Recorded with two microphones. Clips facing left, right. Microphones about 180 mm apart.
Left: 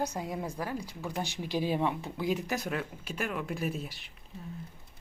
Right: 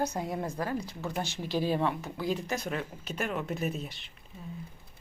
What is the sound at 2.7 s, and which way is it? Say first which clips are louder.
Speech: even; 5° left (ahead or behind).